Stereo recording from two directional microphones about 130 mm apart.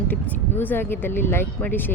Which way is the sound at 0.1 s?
15° left (ahead or behind).